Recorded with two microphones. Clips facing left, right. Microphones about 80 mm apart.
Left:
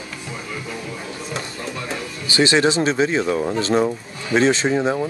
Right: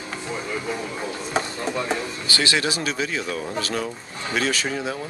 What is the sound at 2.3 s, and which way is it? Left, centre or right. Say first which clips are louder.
Speech: left 8 dB; left.